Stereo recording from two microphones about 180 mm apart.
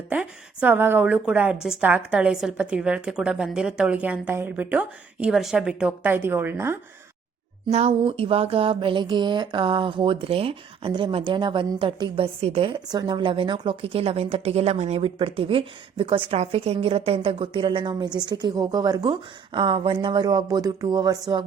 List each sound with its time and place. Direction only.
0.1 s a woman's voice: 5° right (ahead or behind)
7.7 s speech: 35° right (ahead or behind)